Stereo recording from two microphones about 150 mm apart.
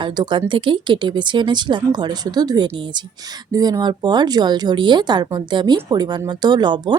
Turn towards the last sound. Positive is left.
turn(degrees=-30)  # may be behind; listen again after turning